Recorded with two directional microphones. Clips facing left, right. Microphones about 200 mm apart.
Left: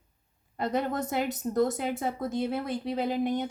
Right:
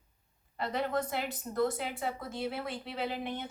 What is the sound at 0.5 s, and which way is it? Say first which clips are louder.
A woman's voice: left 3 dB; 45° left (ahead or behind).